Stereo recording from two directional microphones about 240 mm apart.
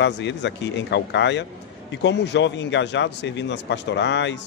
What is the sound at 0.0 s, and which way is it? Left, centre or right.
A man's voice, left.